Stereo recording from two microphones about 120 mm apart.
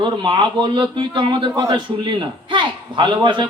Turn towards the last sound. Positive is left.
turn(degrees=-40)  # may be behind; listen again after turning